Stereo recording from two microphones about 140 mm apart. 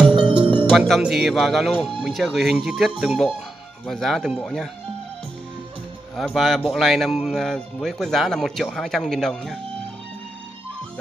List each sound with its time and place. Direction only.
0.1 s music: 35° right (ahead or behind)
0.7 s speech: centre (ahead or behind)
6.1 s speech: centre (ahead or behind)